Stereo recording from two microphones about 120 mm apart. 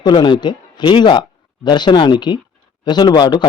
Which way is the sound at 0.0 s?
40° left (ahead or behind).